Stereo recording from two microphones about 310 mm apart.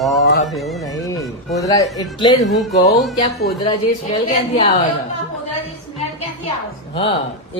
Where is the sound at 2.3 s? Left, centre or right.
Centre.